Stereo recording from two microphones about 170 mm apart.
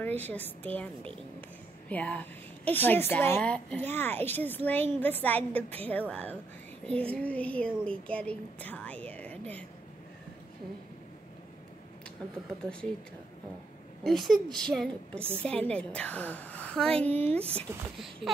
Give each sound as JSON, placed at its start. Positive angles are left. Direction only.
{"t": 0.0, "sound": "a woman's voice", "side_deg": 10}
{"t": 1.9, "sound": "a woman's voice", "side_deg": 10}
{"t": 14.0, "sound": "a woman's voice", "side_deg": 0}
{"t": 17.2, "sound": "speech", "side_deg": -35}
{"t": 17.6, "sound": "a woman's voice", "side_deg": 0}